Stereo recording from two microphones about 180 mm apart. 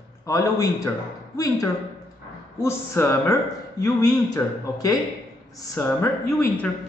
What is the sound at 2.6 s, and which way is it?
A man's voice, 15° left (ahead or behind).